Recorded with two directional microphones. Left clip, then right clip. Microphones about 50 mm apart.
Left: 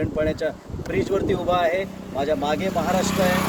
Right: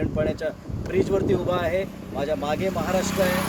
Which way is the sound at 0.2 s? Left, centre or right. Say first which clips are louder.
Left 3 dB; right.